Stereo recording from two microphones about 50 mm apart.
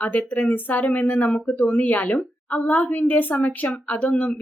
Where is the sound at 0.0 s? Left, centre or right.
Left.